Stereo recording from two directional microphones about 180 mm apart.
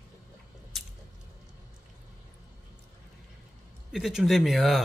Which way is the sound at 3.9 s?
Centre (ahead or behind).